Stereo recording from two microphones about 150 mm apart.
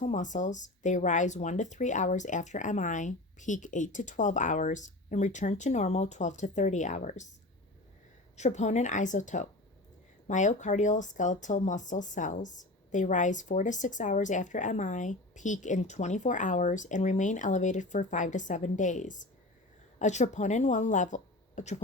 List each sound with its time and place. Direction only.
0.0 s speech: 55° left (ahead or behind)
8.4 s speech: 50° left (ahead or behind)